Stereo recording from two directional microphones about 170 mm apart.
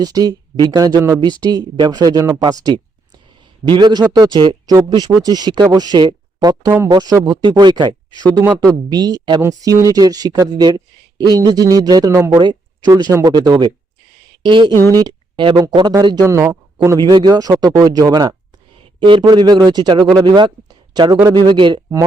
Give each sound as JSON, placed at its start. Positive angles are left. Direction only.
{"t": 0.0, "sound": "speech", "side_deg": -25}
{"t": 12.4, "sound": "a sound", "side_deg": -25}
{"t": 12.9, "sound": "speech", "side_deg": -20}